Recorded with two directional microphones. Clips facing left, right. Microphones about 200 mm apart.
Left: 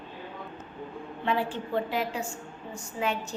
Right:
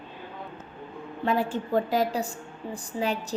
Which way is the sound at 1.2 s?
40° right (ahead or behind).